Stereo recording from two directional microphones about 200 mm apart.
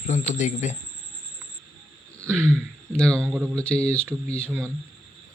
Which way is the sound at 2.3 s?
5° left (ahead or behind).